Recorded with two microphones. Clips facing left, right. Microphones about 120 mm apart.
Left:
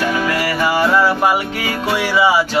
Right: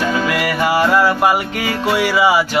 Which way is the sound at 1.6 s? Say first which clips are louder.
Right 2 dB; 10° left (ahead or behind).